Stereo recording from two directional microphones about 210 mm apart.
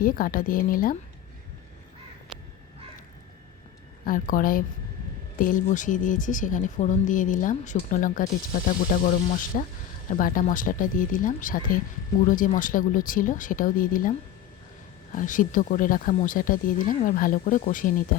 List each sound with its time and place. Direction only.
0.0 s speech: 40° left (ahead or behind)
4.0 s speech: 40° left (ahead or behind)
15.1 s speech: 40° left (ahead or behind)